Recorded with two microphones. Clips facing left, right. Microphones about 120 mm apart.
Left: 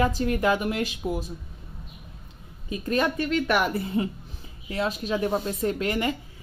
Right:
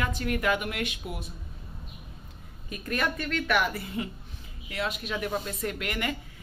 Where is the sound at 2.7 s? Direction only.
25° left (ahead or behind).